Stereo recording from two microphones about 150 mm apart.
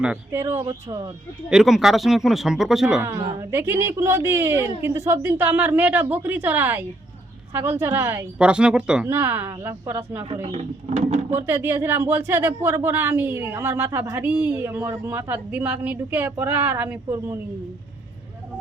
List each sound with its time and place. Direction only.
0.3 s speech: 15° right (ahead or behind)
1.5 s speech: 5° right (ahead or behind)
3.0 s speech: 15° right (ahead or behind)
10.4 s speech: 45° right (ahead or behind)
11.4 s speech: 15° right (ahead or behind)